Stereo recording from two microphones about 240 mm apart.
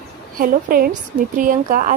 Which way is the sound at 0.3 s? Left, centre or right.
Right.